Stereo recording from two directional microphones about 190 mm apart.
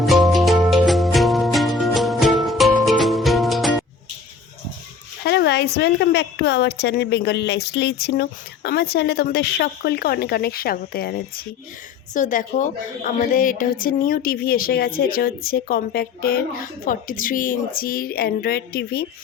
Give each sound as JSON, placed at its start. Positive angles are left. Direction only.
{"t": 0.0, "sound": "music", "side_deg": 0}
{"t": 5.2, "sound": "a woman's voice", "side_deg": 60}